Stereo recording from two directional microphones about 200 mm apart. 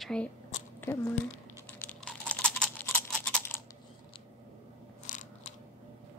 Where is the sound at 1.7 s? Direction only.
5° left (ahead or behind).